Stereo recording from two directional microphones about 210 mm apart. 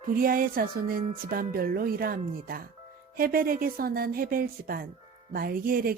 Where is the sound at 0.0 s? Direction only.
40° right (ahead or behind).